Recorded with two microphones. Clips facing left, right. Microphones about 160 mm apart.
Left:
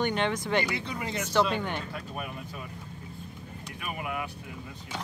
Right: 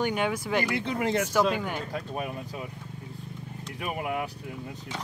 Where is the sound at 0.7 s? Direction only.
55° right (ahead or behind).